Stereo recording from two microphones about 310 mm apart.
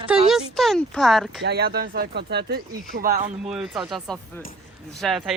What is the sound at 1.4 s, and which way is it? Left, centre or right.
Speech, right.